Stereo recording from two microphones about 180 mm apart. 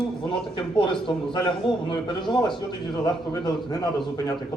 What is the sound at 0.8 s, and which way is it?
A man's voice, 25° left (ahead or behind).